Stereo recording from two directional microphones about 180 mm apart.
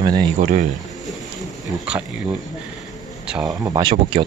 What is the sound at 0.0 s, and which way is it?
Speech, 25° right (ahead or behind).